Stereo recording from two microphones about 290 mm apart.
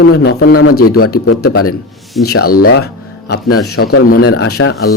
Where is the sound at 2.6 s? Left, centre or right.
Left.